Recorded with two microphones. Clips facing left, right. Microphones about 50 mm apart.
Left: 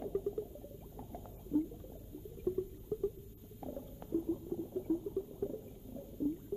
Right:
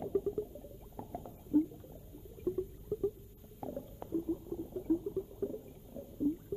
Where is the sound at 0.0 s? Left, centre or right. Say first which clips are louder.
Right 3 dB; centre.